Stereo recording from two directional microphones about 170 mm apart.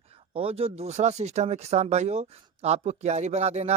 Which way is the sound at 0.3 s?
35° right (ahead or behind).